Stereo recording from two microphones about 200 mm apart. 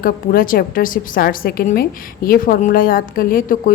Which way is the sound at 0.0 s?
45° left (ahead or behind).